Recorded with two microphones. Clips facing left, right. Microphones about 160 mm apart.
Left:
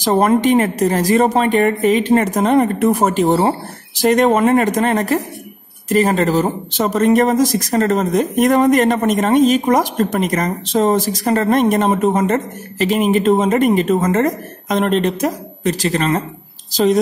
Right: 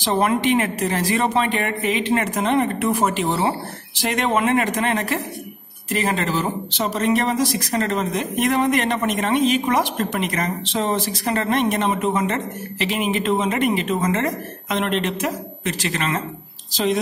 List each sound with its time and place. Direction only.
0.0 s speech: 40° left (ahead or behind)